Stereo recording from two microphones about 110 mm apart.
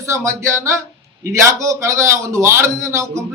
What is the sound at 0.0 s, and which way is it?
A man's voice, 25° right (ahead or behind).